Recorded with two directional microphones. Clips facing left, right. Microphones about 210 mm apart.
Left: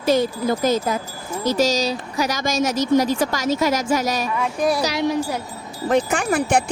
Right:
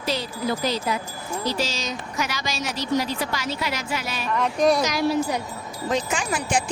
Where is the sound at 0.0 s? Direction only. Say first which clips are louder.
Left 8 dB; 50° left (ahead or behind).